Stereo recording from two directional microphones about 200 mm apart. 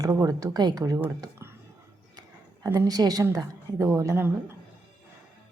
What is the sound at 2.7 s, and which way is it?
A woman's voice, 15° right (ahead or behind).